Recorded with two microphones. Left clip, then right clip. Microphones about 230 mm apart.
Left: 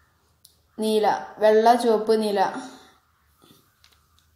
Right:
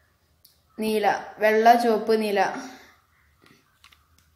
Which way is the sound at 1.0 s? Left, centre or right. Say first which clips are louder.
Left 1 dB; centre.